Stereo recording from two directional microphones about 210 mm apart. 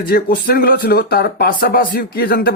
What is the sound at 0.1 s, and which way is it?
Speech, 45° left (ahead or behind).